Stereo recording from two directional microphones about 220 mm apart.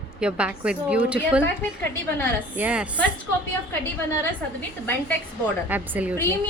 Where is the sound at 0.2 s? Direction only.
5° right (ahead or behind).